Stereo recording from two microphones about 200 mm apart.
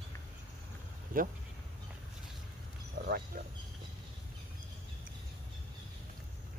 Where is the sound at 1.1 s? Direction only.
45° right (ahead or behind).